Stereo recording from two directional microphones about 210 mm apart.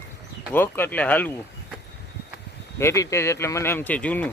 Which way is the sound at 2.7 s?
15° left (ahead or behind).